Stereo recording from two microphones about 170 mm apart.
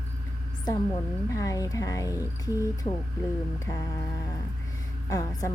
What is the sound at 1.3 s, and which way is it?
Speech, 20° left (ahead or behind).